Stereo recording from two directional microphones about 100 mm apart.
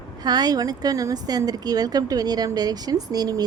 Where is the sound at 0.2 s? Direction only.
40° right (ahead or behind).